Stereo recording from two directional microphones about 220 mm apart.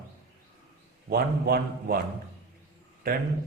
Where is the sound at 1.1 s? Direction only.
45° right (ahead or behind).